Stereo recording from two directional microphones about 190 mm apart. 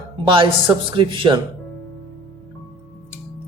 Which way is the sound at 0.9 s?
25° right (ahead or behind).